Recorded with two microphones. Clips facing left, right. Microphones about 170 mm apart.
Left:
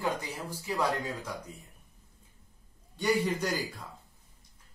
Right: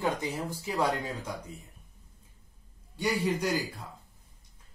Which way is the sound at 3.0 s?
10° right (ahead or behind).